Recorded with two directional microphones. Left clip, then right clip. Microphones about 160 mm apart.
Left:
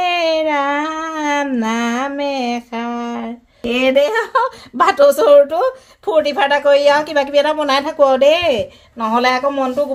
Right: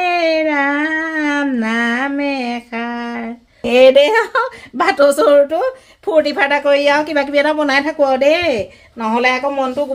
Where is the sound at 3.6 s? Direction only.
55° right (ahead or behind).